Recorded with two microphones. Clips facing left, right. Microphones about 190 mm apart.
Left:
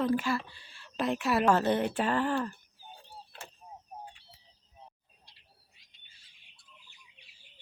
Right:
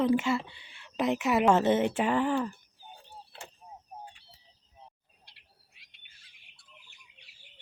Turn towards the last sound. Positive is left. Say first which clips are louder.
# even
turn(degrees=-70)  # may be behind; listen again after turning